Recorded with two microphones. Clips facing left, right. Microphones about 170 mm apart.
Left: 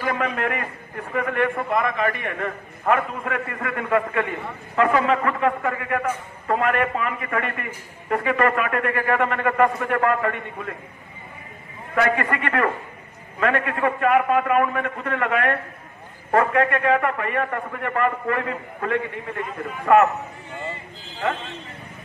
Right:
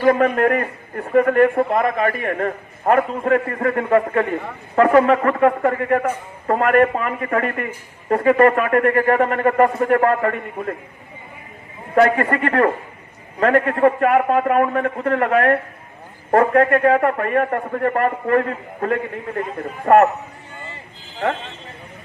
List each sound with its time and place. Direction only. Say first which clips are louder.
0.0 s a man's voice: right 9 dB; 45° right (ahead or behind)
11.9 s a man's voice: right 6 dB; 40° right (ahead or behind)